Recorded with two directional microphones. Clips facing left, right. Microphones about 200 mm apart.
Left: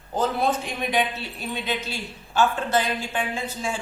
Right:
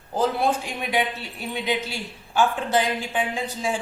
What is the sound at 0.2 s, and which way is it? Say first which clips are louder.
A man's voice: right 1 dB; 10° right (ahead or behind).